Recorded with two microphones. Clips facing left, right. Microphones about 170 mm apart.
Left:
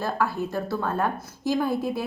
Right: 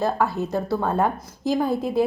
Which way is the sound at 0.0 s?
20° right (ahead or behind).